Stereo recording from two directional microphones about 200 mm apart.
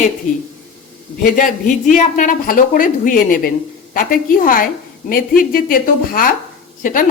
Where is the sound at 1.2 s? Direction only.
40° left (ahead or behind).